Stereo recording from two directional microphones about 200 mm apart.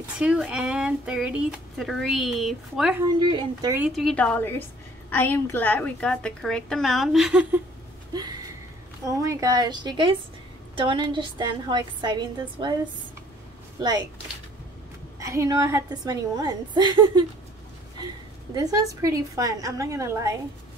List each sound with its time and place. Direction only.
0.0 s speech: 5° right (ahead or behind)
3.2 s a woman's voice: 20° right (ahead or behind)
3.8 s speech: centre (ahead or behind)
8.1 s a sound: 20° right (ahead or behind)
9.0 s a woman's voice: 15° right (ahead or behind)
13.7 s speech: 20° right (ahead or behind)
15.1 s a woman's voice: 15° right (ahead or behind)
18.5 s a woman's voice: 15° right (ahead or behind)